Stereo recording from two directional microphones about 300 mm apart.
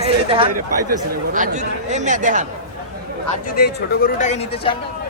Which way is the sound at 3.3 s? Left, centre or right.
Left.